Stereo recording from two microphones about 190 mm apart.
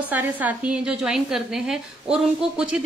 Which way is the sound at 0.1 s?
10° right (ahead or behind).